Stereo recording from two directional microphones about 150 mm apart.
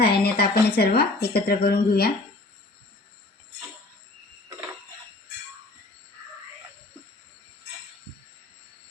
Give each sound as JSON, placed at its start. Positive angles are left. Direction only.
{"t": 0.0, "sound": "speech", "side_deg": 90}